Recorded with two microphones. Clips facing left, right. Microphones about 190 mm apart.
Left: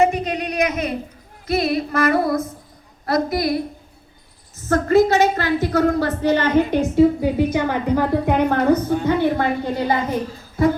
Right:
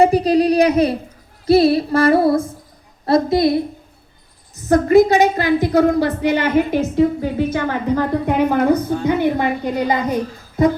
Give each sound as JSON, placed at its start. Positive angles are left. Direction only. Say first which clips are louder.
{"t": 0.0, "sound": "a woman's voice", "louder": "right 6 dB", "side_deg": -35}
{"t": 1.5, "sound": "female singing", "louder": "right 8 dB", "side_deg": -30}
{"t": 4.5, "sound": "a woman's voice", "louder": "right 4 dB", "side_deg": -15}
{"t": 7.2, "sound": "a woman's voice", "louder": "left 1 dB", "side_deg": 15}
{"t": 8.3, "sound": "a woman's voice", "louder": "right 2 dB", "side_deg": -10}
{"t": 10.6, "sound": "female singing", "louder": "right 2 dB", "side_deg": -20}